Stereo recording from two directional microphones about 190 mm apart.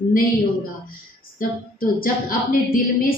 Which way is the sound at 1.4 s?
50° left (ahead or behind).